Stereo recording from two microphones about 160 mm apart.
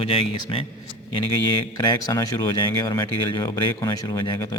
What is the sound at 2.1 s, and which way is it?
Speech, 20° left (ahead or behind).